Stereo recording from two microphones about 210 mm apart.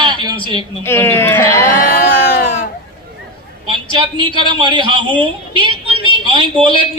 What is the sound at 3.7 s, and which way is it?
A man's voice, 20° right (ahead or behind).